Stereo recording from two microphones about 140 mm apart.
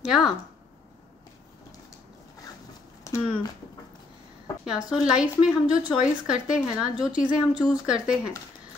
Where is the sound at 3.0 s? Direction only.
20° left (ahead or behind).